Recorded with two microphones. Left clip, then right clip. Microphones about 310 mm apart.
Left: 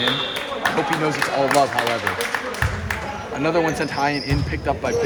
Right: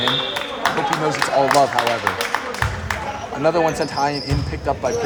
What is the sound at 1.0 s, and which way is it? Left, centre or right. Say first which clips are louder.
Speech: right 3 dB; centre.